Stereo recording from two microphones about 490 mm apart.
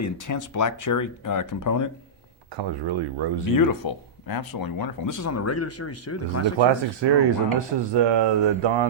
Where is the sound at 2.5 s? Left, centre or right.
Right.